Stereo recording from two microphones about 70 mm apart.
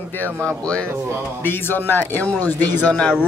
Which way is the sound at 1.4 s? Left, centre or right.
Left.